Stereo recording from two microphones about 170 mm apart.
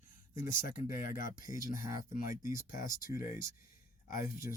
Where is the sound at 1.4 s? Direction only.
20° right (ahead or behind).